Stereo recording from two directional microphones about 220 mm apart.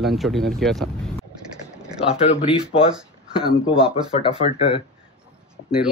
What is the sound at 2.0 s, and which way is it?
Speech, 25° left (ahead or behind).